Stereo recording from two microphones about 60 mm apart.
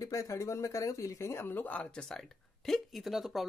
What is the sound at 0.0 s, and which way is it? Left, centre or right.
Speech, left.